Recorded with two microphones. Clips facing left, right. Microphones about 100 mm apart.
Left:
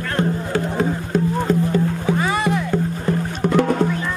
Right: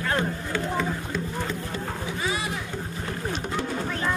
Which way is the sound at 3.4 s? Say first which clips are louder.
Left 17 dB; 70° left (ahead or behind).